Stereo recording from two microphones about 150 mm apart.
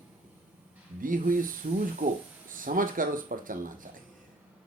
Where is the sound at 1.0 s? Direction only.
65° right (ahead or behind).